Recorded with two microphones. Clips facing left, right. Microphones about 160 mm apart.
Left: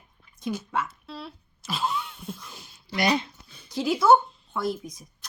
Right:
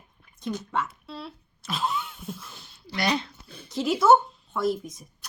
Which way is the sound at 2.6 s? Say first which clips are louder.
Left 4 dB; 15° left (ahead or behind).